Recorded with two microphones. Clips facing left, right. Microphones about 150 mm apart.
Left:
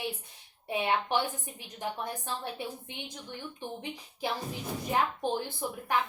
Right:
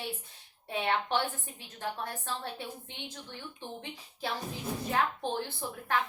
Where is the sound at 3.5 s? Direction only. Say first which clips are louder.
Left 3 dB; 15° left (ahead or behind).